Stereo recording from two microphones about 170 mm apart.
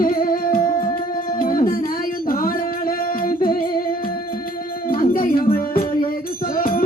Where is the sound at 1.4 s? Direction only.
55° left (ahead or behind).